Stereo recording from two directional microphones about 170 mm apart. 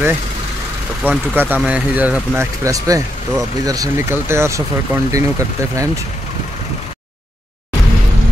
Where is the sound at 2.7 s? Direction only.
20° right (ahead or behind).